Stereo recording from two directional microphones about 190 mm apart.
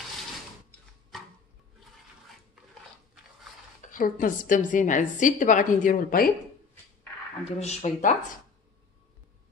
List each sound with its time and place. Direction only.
1.1 s a sound: centre (ahead or behind)
3.9 s a woman's voice: 45° left (ahead or behind)
7.5 s speech: 35° left (ahead or behind)